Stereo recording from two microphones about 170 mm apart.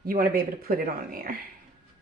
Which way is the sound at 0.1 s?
60° right (ahead or behind).